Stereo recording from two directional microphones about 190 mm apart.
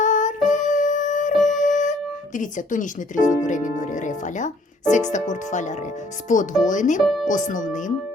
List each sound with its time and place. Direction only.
0.0 s music: 40° left (ahead or behind)
1.4 s speech: 40° left (ahead or behind)